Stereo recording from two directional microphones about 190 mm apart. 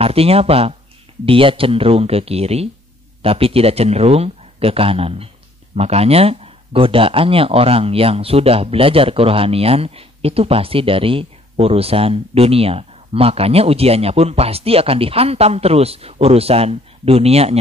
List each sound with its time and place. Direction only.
0.0 s speech: 30° right (ahead or behind)